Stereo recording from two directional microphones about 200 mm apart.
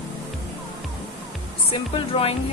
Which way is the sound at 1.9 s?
30° left (ahead or behind).